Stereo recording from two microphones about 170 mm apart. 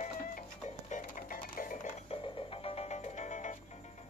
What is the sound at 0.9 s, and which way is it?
Music, 55° left (ahead or behind).